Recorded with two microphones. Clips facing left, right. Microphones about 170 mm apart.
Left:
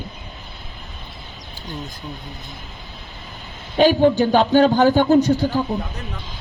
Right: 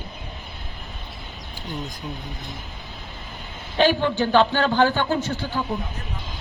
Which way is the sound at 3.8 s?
45° left (ahead or behind).